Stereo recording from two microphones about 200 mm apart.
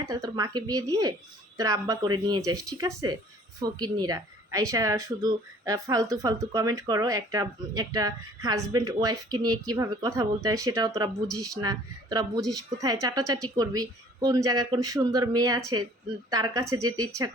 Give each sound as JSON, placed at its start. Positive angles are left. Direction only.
{"t": 0.0, "sound": "a woman's voice", "side_deg": -15}